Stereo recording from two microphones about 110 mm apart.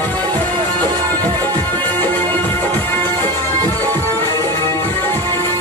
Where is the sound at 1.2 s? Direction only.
15° left (ahead or behind).